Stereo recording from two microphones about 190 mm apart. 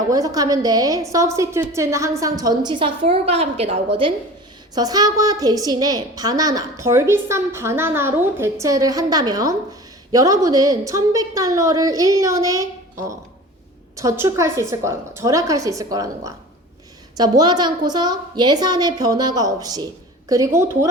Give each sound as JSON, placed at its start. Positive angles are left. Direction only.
{"t": 0.1, "sound": "a woman's voice", "side_deg": -20}